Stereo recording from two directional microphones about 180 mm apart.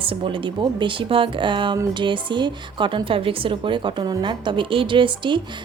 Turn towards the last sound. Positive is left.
turn(degrees=-25)  # may be behind; listen again after turning